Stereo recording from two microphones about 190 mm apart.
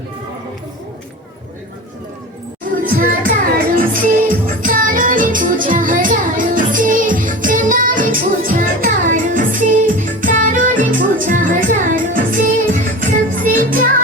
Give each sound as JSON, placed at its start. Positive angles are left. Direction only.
{"t": 2.7, "sound": "music", "side_deg": -45}